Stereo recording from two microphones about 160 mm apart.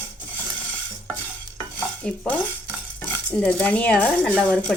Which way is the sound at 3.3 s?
10° left (ahead or behind).